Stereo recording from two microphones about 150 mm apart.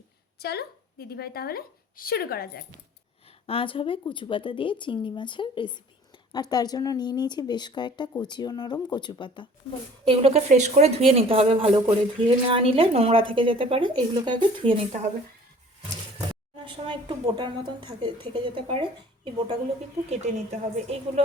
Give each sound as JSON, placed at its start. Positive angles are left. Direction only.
{"t": 0.3, "sound": "a woman's voice", "side_deg": 90}
{"t": 3.4, "sound": "a woman's voice", "side_deg": 40}
{"t": 10.0, "sound": "a woman's voice", "side_deg": -40}
{"t": 16.6, "sound": "a woman's voice", "side_deg": -35}
{"t": 20.1, "sound": "speech", "side_deg": -45}